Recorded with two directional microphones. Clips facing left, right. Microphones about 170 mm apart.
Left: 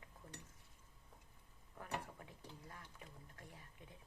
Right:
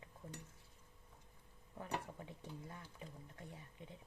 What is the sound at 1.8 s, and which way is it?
Speech, 25° right (ahead or behind).